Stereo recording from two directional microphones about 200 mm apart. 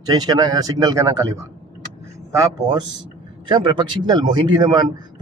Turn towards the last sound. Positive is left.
turn(degrees=-20)  # may be behind; listen again after turning